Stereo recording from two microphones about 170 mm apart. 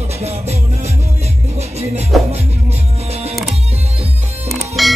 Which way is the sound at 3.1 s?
40° right (ahead or behind).